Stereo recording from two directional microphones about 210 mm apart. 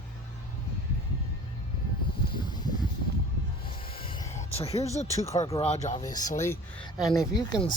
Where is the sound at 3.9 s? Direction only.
25° left (ahead or behind).